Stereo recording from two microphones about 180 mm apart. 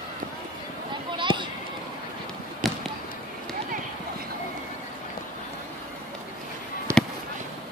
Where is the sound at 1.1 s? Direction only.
25° right (ahead or behind).